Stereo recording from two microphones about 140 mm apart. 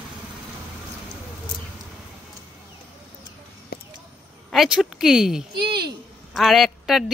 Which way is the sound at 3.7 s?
90° left.